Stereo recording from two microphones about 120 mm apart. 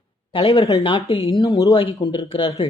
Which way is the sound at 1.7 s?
40° left (ahead or behind).